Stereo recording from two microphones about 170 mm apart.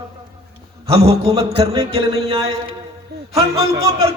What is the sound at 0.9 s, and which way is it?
Speech, 35° right (ahead or behind).